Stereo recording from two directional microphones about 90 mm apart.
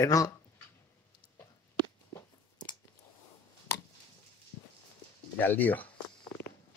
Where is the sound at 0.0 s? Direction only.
40° left (ahead or behind).